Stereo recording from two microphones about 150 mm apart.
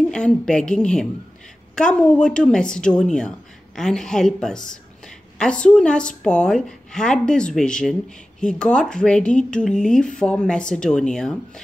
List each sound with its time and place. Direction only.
0.1 s a woman's voice: 5° left (ahead or behind)